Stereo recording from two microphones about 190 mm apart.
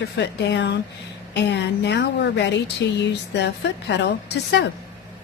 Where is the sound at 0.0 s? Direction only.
65° left (ahead or behind).